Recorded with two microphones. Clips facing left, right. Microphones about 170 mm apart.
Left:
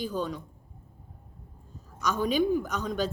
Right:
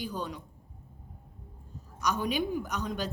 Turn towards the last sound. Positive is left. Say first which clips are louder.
# left 4 dB
turn(degrees=-15)  # may be behind; listen again after turning